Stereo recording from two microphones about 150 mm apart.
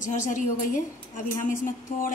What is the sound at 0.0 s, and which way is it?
A woman's voice, 55° left (ahead or behind).